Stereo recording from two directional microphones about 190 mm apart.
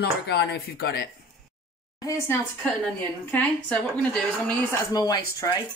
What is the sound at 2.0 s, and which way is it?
A woman's voice, 15° left (ahead or behind).